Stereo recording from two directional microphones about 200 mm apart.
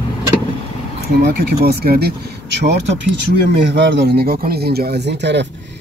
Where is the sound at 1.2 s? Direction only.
55° right (ahead or behind).